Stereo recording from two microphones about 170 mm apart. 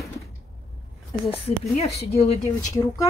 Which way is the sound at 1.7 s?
40° left (ahead or behind).